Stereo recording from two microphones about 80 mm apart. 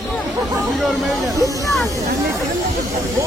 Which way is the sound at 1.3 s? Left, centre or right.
Right.